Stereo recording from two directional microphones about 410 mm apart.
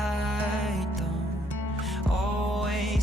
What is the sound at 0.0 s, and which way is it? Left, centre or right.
Music, centre.